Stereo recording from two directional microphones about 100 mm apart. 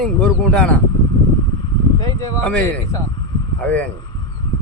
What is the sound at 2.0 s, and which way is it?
Speech, 35° left (ahead or behind).